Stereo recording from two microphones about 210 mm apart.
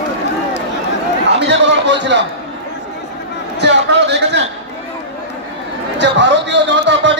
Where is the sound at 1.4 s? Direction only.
55° right (ahead or behind).